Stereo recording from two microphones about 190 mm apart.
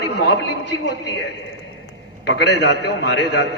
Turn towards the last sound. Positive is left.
turn(degrees=60)  # may be behind; listen again after turning